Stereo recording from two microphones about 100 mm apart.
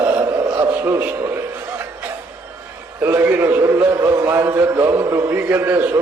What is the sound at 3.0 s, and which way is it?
A man's voice, 25° right (ahead or behind).